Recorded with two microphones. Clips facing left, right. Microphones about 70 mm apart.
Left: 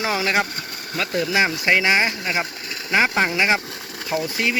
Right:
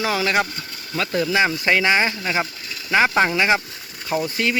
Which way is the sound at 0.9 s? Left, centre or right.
Centre.